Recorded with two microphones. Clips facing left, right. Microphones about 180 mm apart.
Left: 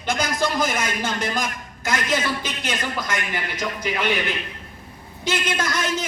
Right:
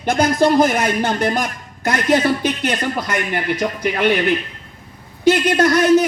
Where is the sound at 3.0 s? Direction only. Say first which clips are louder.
Right 6 dB; 65° right (ahead or behind).